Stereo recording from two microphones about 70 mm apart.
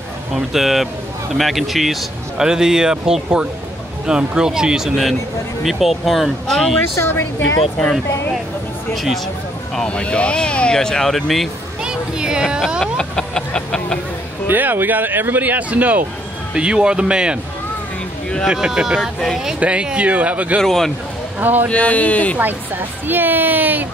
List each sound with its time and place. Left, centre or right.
0.3 s a man's voice: centre
7.0 s a woman's voice: left
8.9 s a man's voice: centre
9.8 s speech: centre
11.8 s speech: centre
12.8 s vehicle: centre
14.5 s speech: right
18.5 s speech: centre
18.9 s a man's voice: centre
19.6 s speech: centre
20.6 s a man's voice: centre
21.4 s speech: right
21.6 s speech: centre
22.4 s speech: right